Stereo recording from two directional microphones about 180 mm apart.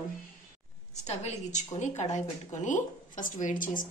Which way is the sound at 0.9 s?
40° left (ahead or behind).